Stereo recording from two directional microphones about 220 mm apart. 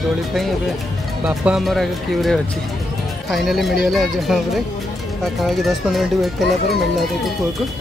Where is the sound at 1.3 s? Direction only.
5° right (ahead or behind).